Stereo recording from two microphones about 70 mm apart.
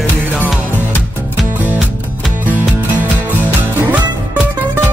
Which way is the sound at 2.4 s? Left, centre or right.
Right.